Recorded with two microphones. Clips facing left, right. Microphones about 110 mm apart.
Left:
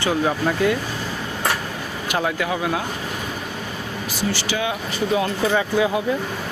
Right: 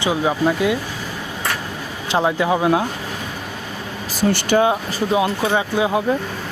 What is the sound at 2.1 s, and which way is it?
Speech, 25° right (ahead or behind).